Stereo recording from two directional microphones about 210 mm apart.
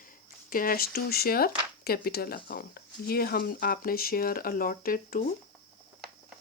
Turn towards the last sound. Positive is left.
turn(degrees=40)  # may be behind; listen again after turning